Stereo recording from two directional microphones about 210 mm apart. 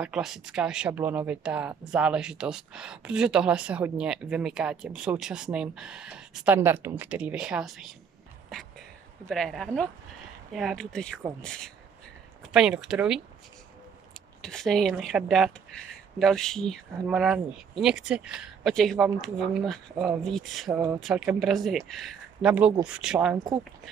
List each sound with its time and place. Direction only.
0.0 s speech: 5° right (ahead or behind)
8.5 s a sound: centre (ahead or behind)
9.3 s speech: centre (ahead or behind)
14.4 s speech: centre (ahead or behind)
23.3 s speech: 15° right (ahead or behind)